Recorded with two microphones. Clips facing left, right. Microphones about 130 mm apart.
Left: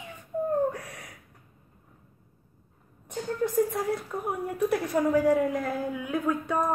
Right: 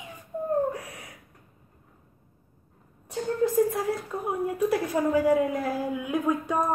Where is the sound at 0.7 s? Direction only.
Centre (ahead or behind).